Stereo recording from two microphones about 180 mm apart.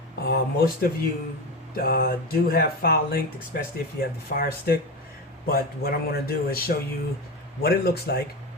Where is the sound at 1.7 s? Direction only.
55° left (ahead or behind).